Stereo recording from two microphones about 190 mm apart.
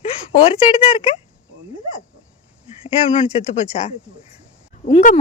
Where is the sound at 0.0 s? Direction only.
30° left (ahead or behind).